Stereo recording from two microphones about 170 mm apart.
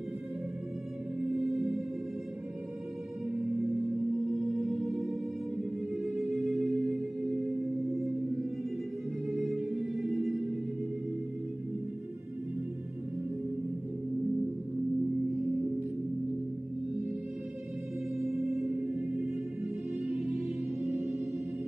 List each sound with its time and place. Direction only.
1.3 s music: centre (ahead or behind)
4.3 s music: centre (ahead or behind)
9.4 s music: centre (ahead or behind)
18.1 s music: centre (ahead or behind)